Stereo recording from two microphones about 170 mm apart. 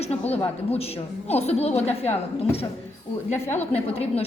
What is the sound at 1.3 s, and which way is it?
Speech, 40° left (ahead or behind).